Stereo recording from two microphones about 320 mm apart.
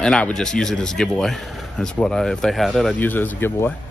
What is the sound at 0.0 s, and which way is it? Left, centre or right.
Speech, centre.